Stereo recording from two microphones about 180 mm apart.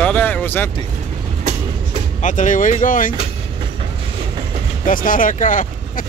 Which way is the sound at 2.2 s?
45° left (ahead or behind).